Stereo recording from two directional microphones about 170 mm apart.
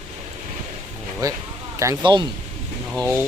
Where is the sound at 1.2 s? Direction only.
20° right (ahead or behind).